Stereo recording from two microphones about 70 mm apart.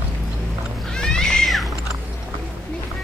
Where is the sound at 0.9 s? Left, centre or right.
Centre.